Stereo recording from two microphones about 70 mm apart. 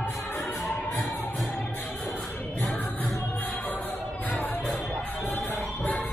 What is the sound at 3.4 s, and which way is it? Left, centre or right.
Music, left.